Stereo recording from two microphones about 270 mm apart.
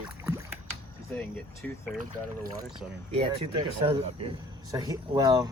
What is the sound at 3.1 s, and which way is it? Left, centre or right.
Speech, right.